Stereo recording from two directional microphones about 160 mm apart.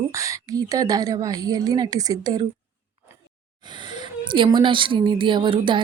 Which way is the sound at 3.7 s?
30° right (ahead or behind).